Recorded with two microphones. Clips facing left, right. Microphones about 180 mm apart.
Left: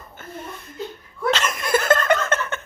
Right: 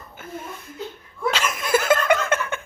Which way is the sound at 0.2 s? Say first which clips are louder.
Right 1 dB; 5° right (ahead or behind).